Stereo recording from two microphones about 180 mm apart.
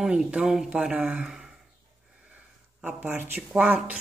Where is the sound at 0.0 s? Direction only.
5° right (ahead or behind).